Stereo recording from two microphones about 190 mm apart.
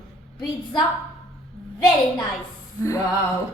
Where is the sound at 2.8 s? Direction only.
15° left (ahead or behind).